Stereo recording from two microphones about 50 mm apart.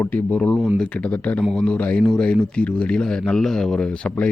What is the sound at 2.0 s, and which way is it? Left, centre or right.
Speech, centre.